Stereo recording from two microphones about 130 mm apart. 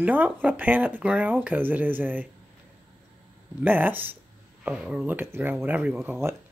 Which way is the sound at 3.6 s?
15° right (ahead or behind).